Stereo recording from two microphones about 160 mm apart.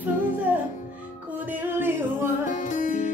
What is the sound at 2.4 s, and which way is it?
Music, 50° left (ahead or behind).